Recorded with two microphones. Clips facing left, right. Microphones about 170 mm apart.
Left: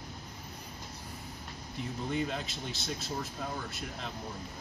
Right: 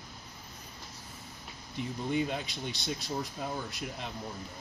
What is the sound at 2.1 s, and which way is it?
Speech, centre (ahead or behind).